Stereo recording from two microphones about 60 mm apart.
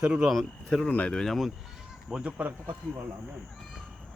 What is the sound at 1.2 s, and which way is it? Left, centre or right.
Speech, centre.